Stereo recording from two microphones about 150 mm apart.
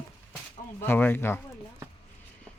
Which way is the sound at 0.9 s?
10° left (ahead or behind).